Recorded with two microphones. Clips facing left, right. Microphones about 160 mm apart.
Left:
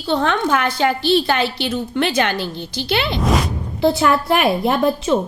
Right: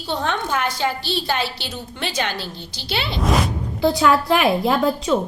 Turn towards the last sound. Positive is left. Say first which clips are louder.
# left 2 dB
turn(degrees=25)  # may be behind; listen again after turning